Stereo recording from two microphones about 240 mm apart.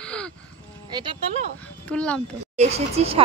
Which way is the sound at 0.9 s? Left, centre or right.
Centre.